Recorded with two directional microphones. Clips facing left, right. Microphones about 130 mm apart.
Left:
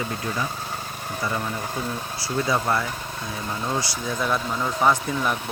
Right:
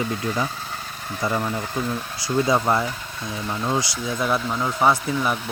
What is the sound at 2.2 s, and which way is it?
Speech, 20° right (ahead or behind).